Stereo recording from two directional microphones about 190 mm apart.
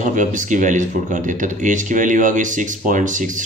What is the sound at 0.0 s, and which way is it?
Speech, 40° right (ahead or behind).